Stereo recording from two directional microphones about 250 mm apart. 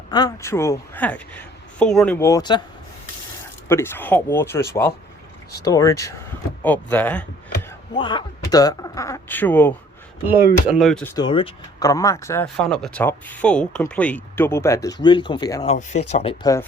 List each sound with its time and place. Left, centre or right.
0.1 s speech: centre
3.7 s speech: centre
5.6 s speech: centre
7.9 s speech: centre
15.6 s speech: left